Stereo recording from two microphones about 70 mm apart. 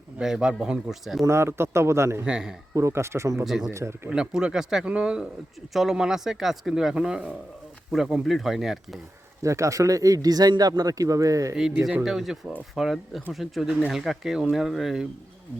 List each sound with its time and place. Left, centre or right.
0.2 s speech: centre
1.2 s a man's voice: right
2.2 s speech: centre
2.7 s a man's voice: right
3.4 s speech: centre
3.7 s a man's voice: right
4.1 s speech: centre
9.4 s speech: right
12.0 s speech: centre